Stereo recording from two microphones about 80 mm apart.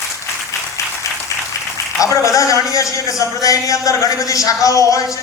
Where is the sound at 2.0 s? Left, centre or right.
Left.